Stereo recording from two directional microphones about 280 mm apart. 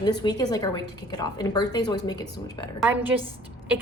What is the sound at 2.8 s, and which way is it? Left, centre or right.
Speech, centre.